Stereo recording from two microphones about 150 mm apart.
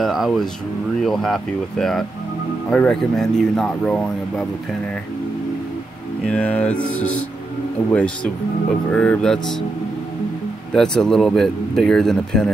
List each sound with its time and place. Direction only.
0.0 s a sound: centre (ahead or behind)
1.0 s speech: 5° left (ahead or behind)
6.2 s music: 5° left (ahead or behind)
8.9 s speech: 5° left (ahead or behind)
10.7 s speech: 5° left (ahead or behind)